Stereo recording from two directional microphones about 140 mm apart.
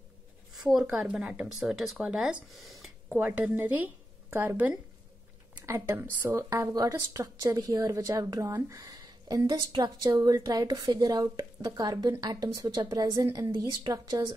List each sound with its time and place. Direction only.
0.7 s speech: 5° right (ahead or behind); by 14.3 s 25° right (ahead or behind)